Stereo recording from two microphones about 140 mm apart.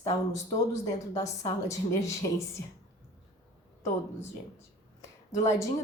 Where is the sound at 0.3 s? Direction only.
20° left (ahead or behind).